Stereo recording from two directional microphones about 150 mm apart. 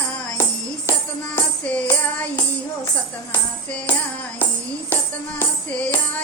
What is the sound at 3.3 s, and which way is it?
Music, 15° left (ahead or behind).